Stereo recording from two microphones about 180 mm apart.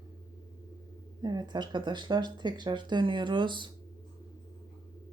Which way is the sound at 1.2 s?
25° right (ahead or behind).